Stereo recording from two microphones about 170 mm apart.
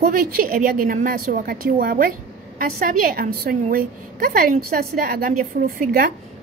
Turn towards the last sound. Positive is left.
turn(degrees=-60)  # may be behind; listen again after turning